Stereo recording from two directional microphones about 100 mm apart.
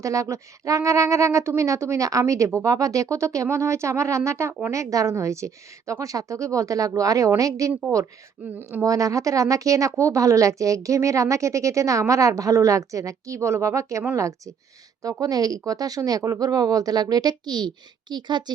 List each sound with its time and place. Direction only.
0.0 s a woman's voice: 30° right (ahead or behind)
7.7 s a woman's voice: 15° right (ahead or behind)
8.8 s a woman's voice: 35° right (ahead or behind)